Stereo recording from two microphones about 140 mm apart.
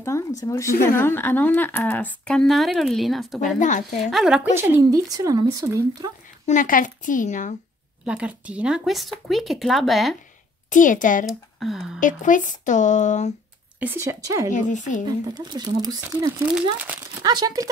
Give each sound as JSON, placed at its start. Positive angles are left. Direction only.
{"t": 0.4, "sound": "a woman's voice", "side_deg": 25}
{"t": 3.5, "sound": "speech", "side_deg": 60}
{"t": 4.0, "sound": "speech", "side_deg": 0}
{"t": 4.6, "sound": "speech", "side_deg": -20}
{"t": 6.4, "sound": "speech", "side_deg": 70}
{"t": 8.0, "sound": "speech", "side_deg": -10}
{"t": 10.7, "sound": "speech", "side_deg": 70}
{"t": 11.2, "sound": "speech", "side_deg": 0}
{"t": 12.0, "sound": "speech", "side_deg": 70}
{"t": 13.7, "sound": "speech", "side_deg": -15}
{"t": 14.5, "sound": "speech", "side_deg": 65}
{"t": 15.0, "sound": "speech", "side_deg": -30}
{"t": 16.7, "sound": "a child's voice", "side_deg": -10}
{"t": 17.2, "sound": "speech", "side_deg": -30}